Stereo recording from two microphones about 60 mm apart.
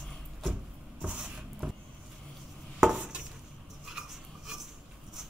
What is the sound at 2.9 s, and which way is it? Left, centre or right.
Dishes, centre.